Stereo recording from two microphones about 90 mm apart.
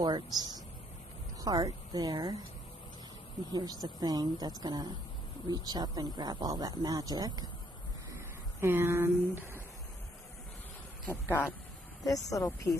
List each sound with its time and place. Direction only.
0.0 s a woman's voice: 50° right (ahead or behind)
4.0 s speech: 45° right (ahead or behind)
8.1 s a sound: 30° right (ahead or behind)
11.1 s speech: 25° left (ahead or behind)
12.0 s speech: 40° left (ahead or behind)